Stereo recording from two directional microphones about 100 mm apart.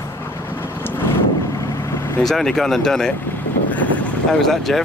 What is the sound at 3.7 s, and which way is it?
Vehicle, 15° left (ahead or behind).